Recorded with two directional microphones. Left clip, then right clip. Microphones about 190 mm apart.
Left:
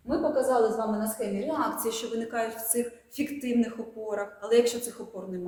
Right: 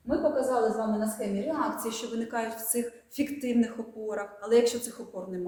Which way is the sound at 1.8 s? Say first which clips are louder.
Left 3 dB; centre (ahead or behind).